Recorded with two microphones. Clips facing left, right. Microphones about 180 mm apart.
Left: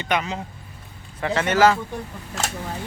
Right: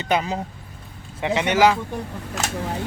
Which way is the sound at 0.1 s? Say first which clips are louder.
Right 2 dB; 30° right (ahead or behind).